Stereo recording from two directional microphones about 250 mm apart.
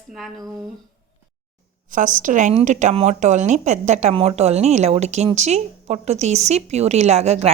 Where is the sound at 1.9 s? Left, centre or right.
Right.